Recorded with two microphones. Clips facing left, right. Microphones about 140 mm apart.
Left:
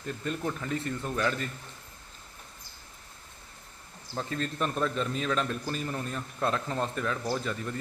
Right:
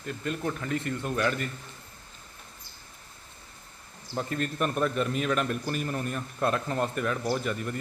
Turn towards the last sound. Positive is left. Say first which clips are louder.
# right 2 dB
turn(degrees=-10)  # may be behind; listen again after turning